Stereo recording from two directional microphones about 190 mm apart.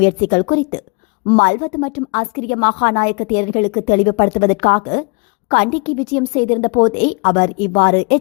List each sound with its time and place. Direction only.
0.0 s a woman's voice: 40° left (ahead or behind)